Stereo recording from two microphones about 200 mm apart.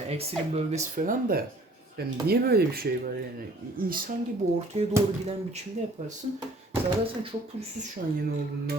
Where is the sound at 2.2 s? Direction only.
50° right (ahead or behind).